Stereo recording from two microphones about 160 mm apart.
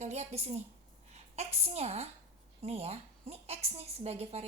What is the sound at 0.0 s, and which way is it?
A woman's voice, 45° right (ahead or behind).